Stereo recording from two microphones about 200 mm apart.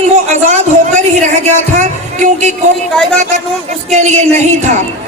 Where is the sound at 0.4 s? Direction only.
35° right (ahead or behind).